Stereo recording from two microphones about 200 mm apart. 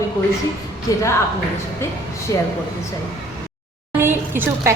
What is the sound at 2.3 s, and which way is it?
Speech, 20° left (ahead or behind).